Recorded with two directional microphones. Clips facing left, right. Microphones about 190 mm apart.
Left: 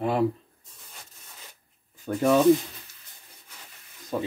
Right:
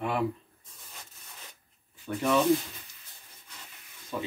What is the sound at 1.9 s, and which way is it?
Speech, 40° left (ahead or behind).